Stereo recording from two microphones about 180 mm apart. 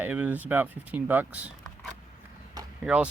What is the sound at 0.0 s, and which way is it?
Speech, 5° right (ahead or behind).